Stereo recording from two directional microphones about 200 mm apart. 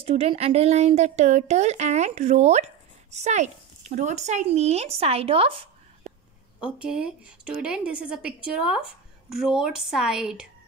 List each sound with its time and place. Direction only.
0.0 s speech: 30° right (ahead or behind)
6.8 s speech: 5° right (ahead or behind)